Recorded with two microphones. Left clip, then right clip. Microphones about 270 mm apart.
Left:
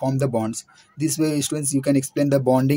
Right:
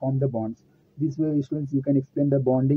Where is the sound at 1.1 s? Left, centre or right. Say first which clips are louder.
Left 4 dB; left.